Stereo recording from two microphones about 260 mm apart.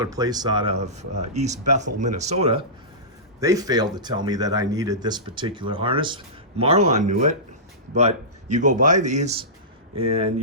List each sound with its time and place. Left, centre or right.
0.0 s speech: centre